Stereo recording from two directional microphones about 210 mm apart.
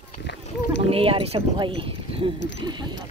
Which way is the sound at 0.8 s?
25° right (ahead or behind).